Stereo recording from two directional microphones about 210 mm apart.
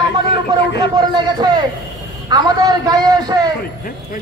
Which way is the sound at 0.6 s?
55° left (ahead or behind).